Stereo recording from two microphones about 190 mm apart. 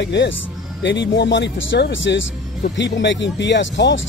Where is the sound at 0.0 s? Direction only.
65° left (ahead or behind).